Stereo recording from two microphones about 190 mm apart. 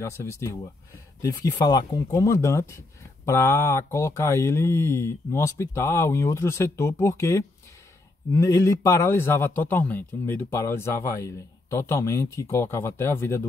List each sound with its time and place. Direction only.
0.0 s a man's voice: 15° left (ahead or behind)